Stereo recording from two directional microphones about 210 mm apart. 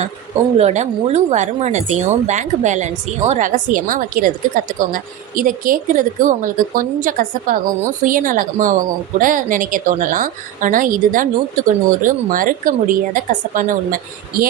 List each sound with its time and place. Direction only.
0.6 s speech: 30° right (ahead or behind)